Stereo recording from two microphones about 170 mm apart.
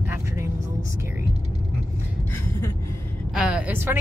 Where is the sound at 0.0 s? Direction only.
15° right (ahead or behind).